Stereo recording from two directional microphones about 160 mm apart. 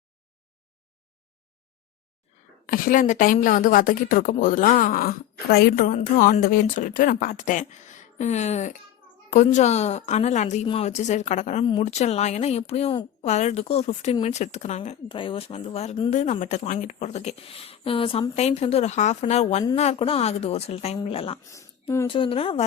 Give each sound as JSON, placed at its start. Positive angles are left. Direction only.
{"t": 2.6, "sound": "a woman's voice", "side_deg": 60}
{"t": 11.6, "sound": "speech", "side_deg": 30}
{"t": 11.9, "sound": "a woman's voice", "side_deg": 45}
{"t": 15.1, "sound": "a woman's voice", "side_deg": 35}
{"t": 21.5, "sound": "a sound", "side_deg": 15}
{"t": 22.1, "sound": "a woman's voice", "side_deg": 35}